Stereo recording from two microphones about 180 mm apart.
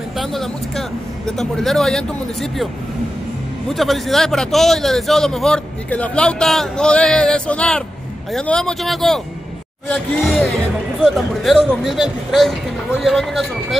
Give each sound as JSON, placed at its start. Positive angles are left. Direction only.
{"t": 0.2, "sound": "a man's voice", "side_deg": 0}